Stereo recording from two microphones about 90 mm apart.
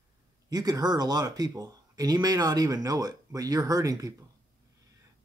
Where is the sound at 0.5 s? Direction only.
45° right (ahead or behind).